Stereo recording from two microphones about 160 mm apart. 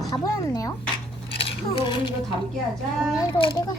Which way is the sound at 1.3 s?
35° left (ahead or behind).